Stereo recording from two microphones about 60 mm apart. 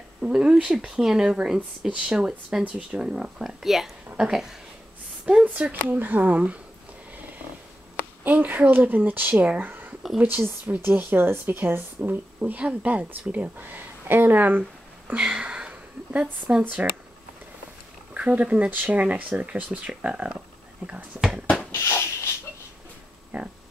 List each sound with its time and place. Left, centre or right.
0.2 s speech: centre
3.4 s speech: centre
5.4 s speech: right
8.2 s speech: right
12.4 s speech: right
15.0 s speech: centre
18.1 s speech: right
21.7 s a sound: left
23.3 s speech: right